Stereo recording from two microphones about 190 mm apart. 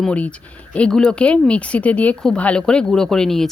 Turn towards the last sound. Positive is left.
turn(degrees=0)  # may be behind; listen again after turning